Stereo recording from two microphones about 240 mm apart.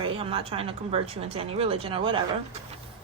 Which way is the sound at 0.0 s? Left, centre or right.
Right.